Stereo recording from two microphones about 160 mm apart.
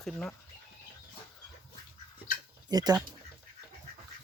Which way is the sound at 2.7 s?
25° right (ahead or behind).